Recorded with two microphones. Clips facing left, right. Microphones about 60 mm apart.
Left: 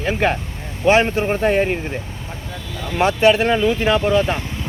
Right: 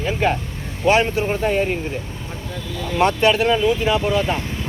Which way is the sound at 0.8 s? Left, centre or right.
Left.